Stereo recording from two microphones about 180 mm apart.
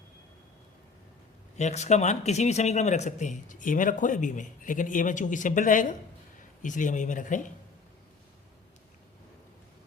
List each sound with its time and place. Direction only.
1.5 s speech: 40° left (ahead or behind)